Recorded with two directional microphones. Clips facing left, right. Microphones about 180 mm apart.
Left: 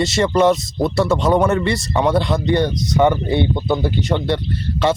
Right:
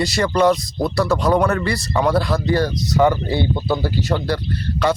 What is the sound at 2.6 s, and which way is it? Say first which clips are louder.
Speech: even; centre (ahead or behind).